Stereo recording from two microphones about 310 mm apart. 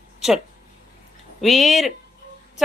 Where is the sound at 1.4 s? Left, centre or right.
Centre.